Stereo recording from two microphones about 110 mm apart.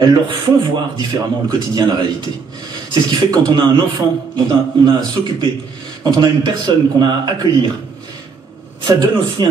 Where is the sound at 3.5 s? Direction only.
40° right (ahead or behind).